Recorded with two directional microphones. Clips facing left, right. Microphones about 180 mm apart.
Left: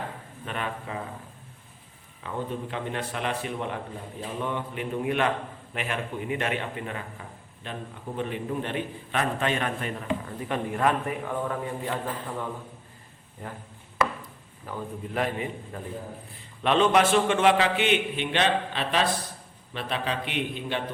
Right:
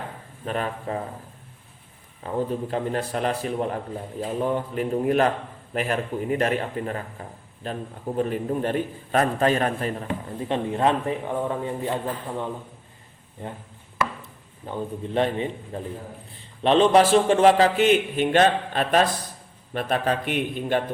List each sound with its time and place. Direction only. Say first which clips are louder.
0.4 s a man's voice: right 5 dB; 40° right (ahead or behind)
2.2 s a man's voice: right 6 dB; 40° right (ahead or behind)
10.2 s a man's voice: right 4 dB; 25° right (ahead or behind)
14.7 s a man's voice: right 5 dB; 30° right (ahead or behind); by 20.8 s 45° right (ahead or behind)